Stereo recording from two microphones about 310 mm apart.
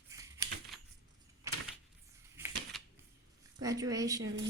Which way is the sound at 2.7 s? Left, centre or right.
Centre.